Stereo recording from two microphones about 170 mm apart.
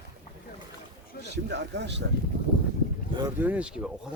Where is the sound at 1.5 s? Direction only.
85° right.